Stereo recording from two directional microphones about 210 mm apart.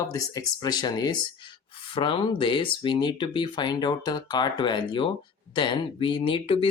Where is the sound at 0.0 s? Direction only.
15° left (ahead or behind).